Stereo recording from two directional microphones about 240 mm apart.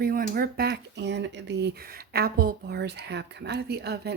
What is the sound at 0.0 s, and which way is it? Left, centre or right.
Speech, right.